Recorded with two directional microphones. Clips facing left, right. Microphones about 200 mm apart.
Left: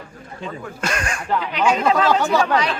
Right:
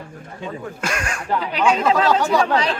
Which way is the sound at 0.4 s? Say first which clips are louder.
Even; 10° right (ahead or behind).